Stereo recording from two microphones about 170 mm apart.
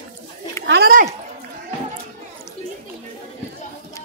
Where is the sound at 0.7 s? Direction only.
65° right (ahead or behind).